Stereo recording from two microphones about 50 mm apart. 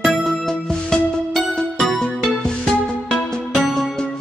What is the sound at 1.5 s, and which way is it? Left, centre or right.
Music, centre.